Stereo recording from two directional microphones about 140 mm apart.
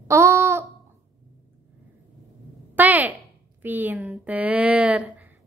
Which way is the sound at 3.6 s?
15° right (ahead or behind).